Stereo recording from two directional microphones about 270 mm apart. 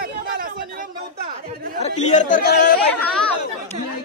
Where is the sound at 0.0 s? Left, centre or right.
Right.